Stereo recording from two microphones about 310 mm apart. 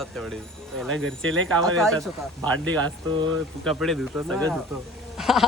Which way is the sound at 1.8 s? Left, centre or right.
Centre.